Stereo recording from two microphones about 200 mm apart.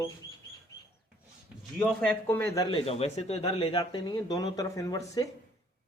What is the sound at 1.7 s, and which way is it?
Speech, 5° left (ahead or behind).